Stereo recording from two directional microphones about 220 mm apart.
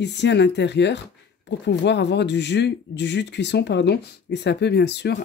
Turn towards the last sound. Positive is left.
turn(degrees=50)  # may be behind; listen again after turning